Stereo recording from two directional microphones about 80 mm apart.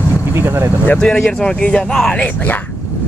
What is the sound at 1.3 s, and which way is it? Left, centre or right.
Speech, centre.